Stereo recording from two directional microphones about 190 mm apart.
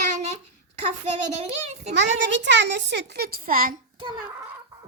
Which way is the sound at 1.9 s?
70° right (ahead or behind).